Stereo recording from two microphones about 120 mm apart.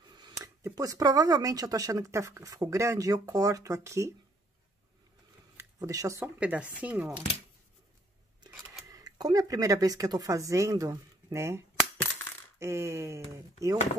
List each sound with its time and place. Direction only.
0.1 s a sound: 35° right (ahead or behind)
0.6 s speech: 25° right (ahead or behind)
5.6 s speech: 30° right (ahead or behind)
6.4 s speech: 10° right (ahead or behind)
8.8 s speech: 30° right (ahead or behind)